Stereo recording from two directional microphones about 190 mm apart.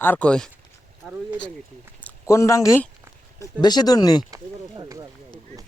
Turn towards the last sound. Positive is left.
turn(degrees=-20)  # may be behind; listen again after turning